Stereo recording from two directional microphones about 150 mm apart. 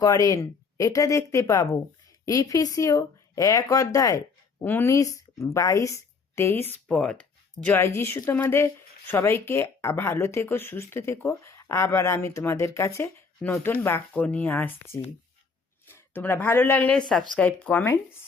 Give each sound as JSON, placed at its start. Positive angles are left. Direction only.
{"t": 0.0, "sound": "a woman's voice", "side_deg": 25}
{"t": 6.8, "sound": "speech", "side_deg": 5}
{"t": 15.9, "sound": "speech", "side_deg": 15}